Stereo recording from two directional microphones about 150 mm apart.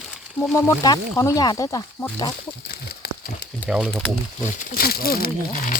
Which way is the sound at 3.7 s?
5° right (ahead or behind).